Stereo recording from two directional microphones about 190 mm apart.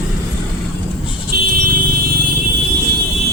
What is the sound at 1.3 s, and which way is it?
Vehicle, 55° right (ahead or behind).